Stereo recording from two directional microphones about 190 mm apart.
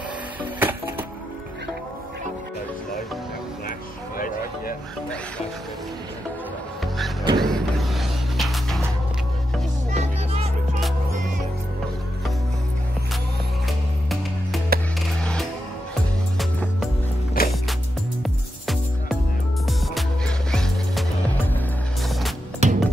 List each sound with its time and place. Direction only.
0.4 s music: 10° right (ahead or behind)
7.3 s music: centre (ahead or behind)
9.9 s music: 35° right (ahead or behind)
14.7 s music: 50° right (ahead or behind)
16.3 s music: centre (ahead or behind)
17.4 s music: 50° left (ahead or behind)
18.2 s music: centre (ahead or behind)
22.6 s music: 35° right (ahead or behind)